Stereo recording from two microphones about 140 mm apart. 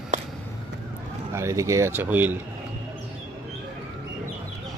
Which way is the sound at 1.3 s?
20° right (ahead or behind).